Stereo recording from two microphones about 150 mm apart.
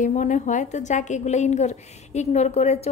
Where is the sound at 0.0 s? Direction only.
55° left (ahead or behind).